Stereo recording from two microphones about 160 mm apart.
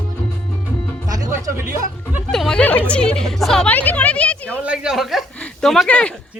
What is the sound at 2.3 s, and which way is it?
A woman's voice, 5° left (ahead or behind).